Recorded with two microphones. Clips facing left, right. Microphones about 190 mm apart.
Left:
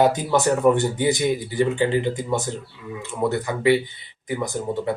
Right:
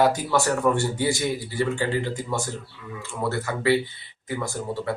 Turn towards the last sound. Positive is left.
turn(degrees=20)  # may be behind; listen again after turning